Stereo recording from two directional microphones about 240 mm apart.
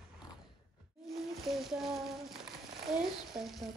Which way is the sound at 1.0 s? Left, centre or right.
Centre.